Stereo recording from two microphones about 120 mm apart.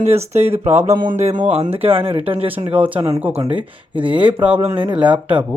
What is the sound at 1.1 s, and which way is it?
Speech, 85° right.